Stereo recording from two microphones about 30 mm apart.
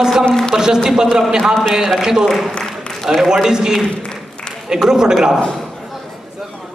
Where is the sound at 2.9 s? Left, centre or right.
Centre.